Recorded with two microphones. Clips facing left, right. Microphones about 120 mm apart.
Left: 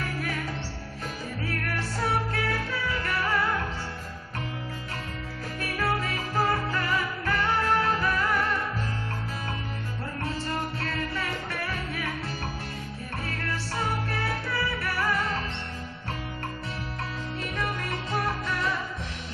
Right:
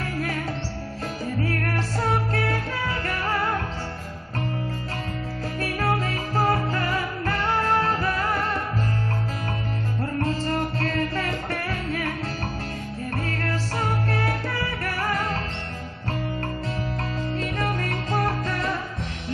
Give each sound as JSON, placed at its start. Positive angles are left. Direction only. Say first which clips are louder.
{"t": 1.4, "sound": "music", "louder": "right 5 dB", "side_deg": -40}
{"t": 5.6, "sound": "music", "louder": "right 3 dB", "side_deg": -40}
{"t": 10.2, "sound": "music", "louder": "right 4 dB", "side_deg": -40}
{"t": 13.3, "sound": "music", "louder": "right 5 dB", "side_deg": -50}
{"t": 17.4, "sound": "music", "louder": "right 4 dB", "side_deg": -45}